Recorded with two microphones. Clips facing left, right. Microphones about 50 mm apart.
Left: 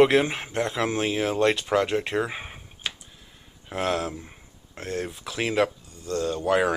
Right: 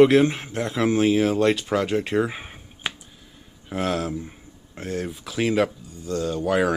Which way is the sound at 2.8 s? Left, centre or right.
Centre.